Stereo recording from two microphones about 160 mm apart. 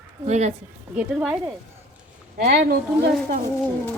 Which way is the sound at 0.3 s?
45° right (ahead or behind).